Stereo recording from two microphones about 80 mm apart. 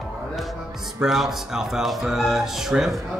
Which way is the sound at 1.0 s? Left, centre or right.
Centre.